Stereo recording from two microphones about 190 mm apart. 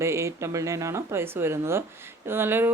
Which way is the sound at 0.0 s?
15° right (ahead or behind).